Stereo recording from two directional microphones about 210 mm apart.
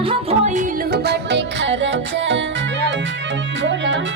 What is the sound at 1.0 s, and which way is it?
Music, 55° right (ahead or behind).